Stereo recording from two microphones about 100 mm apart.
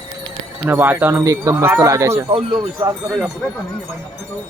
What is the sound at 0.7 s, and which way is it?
Speech, 20° right (ahead or behind).